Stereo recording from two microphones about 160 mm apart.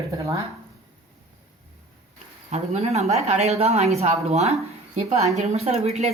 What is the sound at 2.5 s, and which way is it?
A woman's voice, 40° right (ahead or behind).